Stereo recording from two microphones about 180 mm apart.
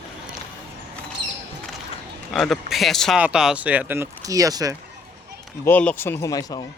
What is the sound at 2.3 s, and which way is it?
Speech, centre (ahead or behind).